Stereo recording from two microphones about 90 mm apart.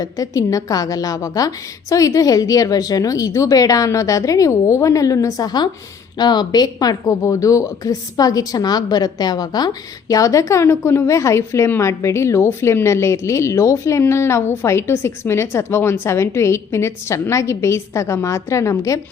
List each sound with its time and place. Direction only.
0.0 s a woman's voice: 40° left (ahead or behind)